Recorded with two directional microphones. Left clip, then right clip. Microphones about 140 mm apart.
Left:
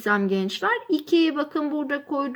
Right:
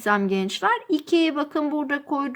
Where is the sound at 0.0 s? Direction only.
25° right (ahead or behind).